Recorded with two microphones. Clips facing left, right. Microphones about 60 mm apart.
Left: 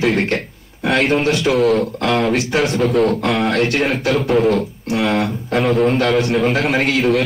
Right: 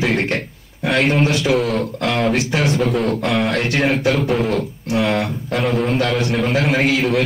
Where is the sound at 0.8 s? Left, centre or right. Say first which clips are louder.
Left 1 dB; centre.